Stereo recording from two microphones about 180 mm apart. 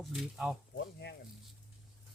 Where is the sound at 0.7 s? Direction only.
70° left (ahead or behind).